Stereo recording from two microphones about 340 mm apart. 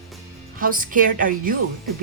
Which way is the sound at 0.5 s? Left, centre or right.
Right.